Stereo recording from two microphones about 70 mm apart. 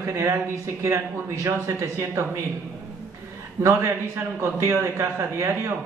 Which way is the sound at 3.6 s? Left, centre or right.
Right.